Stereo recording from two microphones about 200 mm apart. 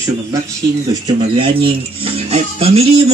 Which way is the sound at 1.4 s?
25° right (ahead or behind).